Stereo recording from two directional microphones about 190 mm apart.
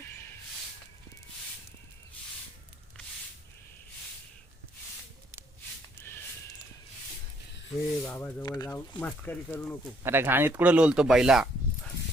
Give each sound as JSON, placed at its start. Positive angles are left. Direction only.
{"t": 7.9, "sound": "speech", "side_deg": 15}
{"t": 10.0, "sound": "speech", "side_deg": -10}